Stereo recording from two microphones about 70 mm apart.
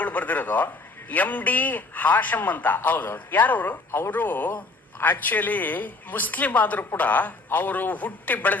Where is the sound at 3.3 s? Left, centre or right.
Left.